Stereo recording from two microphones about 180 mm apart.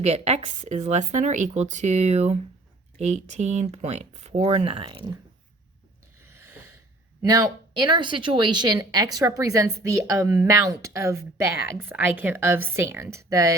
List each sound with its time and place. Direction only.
0.0 s speech: 35° right (ahead or behind)
7.2 s a woman's voice: 20° right (ahead or behind)